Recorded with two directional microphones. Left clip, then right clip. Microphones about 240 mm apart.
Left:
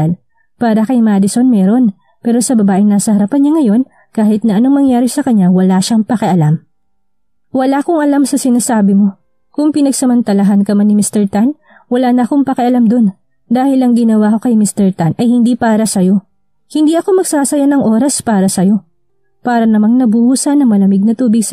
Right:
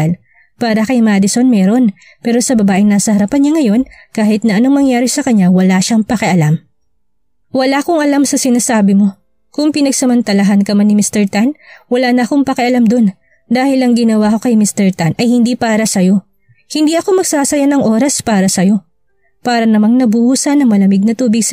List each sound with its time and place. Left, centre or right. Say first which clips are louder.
0.6 s speech: left 1 dB; right